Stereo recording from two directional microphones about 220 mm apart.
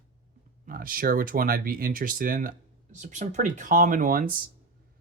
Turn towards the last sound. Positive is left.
turn(degrees=-40)  # may be behind; listen again after turning